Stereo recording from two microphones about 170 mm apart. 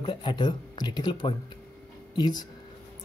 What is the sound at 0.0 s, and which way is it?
Speech, 30° left (ahead or behind).